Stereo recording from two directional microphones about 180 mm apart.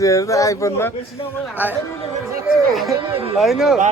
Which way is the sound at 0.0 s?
15° left (ahead or behind).